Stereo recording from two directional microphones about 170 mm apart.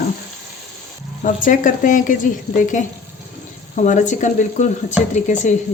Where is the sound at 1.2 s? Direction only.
50° left (ahead or behind).